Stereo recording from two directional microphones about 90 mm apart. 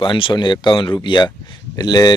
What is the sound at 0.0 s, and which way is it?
Speech, 65° left (ahead or behind).